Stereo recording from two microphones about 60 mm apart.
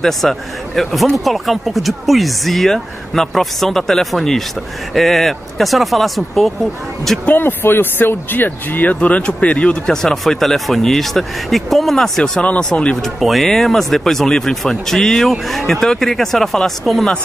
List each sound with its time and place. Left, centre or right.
0.0 s speech: centre
7.2 s speech: left; by 9.9 s centre
10.0 s speech: centre
12.2 s speech: centre
12.9 s speech: centre